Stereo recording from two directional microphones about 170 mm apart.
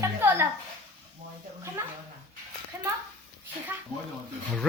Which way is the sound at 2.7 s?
15° right (ahead or behind).